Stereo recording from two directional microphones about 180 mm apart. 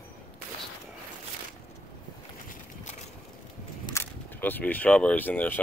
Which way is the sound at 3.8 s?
15° left (ahead or behind).